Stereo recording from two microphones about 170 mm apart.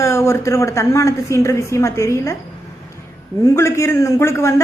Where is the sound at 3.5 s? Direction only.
15° left (ahead or behind).